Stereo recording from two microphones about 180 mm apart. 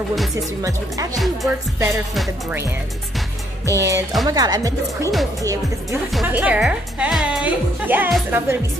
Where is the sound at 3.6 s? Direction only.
20° right (ahead or behind).